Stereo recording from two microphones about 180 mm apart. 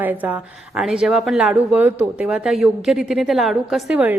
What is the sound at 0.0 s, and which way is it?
A woman's voice, 10° right (ahead or behind).